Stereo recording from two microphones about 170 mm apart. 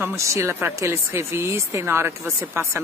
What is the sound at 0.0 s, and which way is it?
Speech, 15° right (ahead or behind).